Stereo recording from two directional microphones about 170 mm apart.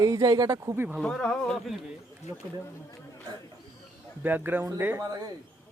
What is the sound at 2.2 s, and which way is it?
Speech, 40° left (ahead or behind).